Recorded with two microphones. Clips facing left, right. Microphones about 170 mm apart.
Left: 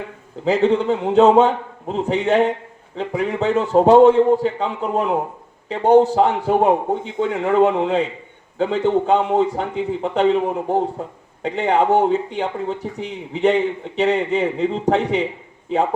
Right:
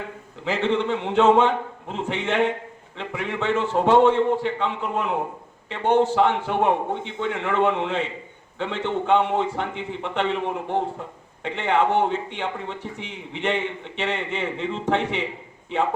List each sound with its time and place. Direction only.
0.4 s speech: 40° left (ahead or behind)